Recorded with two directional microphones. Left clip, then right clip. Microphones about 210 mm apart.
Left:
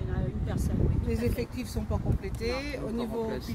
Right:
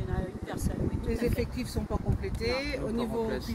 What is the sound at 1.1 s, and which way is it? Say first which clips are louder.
Speech: right 2 dB; 30° left (ahead or behind).